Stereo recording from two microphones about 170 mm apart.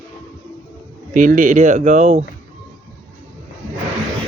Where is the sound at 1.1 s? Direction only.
55° right (ahead or behind).